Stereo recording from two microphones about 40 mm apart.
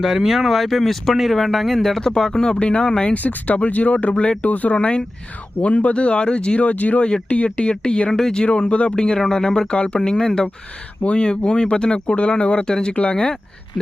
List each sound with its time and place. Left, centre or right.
0.0 s speech: centre; by 4.1 s left
4.1 s speech: left
4.4 s speech: left
6.6 s speech: left
8.1 s speech: centre
8.7 s speech: left
10.0 s speech: centre